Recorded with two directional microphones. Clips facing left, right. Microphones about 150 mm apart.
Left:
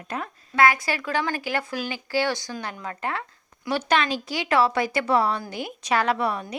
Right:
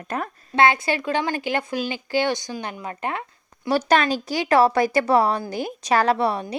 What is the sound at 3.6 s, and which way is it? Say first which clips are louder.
A woman's voice: right 4 dB; 40° right (ahead or behind).